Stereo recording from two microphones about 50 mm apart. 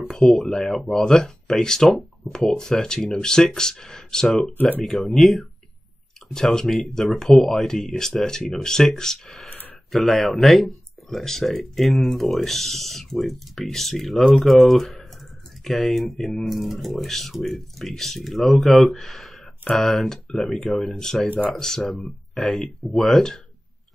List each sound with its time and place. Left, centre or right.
0.0 s speech: centre
4.6 s speech: left
4.8 s speech: centre